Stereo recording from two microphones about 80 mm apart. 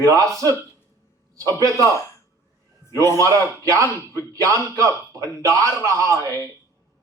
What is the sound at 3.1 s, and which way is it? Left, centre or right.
A man's voice, right.